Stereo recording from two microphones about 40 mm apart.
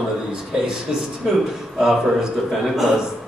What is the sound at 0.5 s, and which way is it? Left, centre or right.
A man's voice, centre.